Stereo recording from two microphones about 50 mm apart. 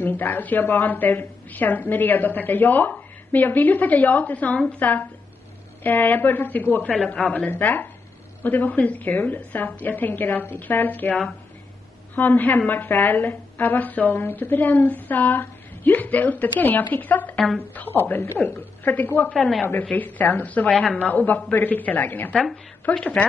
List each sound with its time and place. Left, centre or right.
0.0 s a woman's voice: left
12.2 s a woman's voice: left
19.3 s a woman's voice: centre
19.6 s a woman's voice: left
22.3 s a woman's voice: centre
22.8 s a woman's voice: left